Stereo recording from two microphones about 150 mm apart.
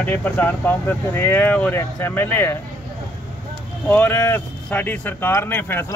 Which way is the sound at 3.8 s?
10° left (ahead or behind).